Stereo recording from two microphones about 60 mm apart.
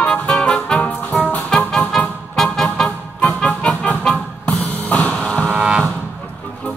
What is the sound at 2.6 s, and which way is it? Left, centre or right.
Music, centre.